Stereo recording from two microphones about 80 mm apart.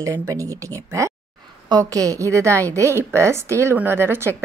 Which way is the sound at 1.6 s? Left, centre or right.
Right.